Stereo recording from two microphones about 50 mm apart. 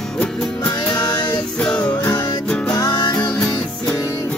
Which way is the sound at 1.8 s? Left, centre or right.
Left.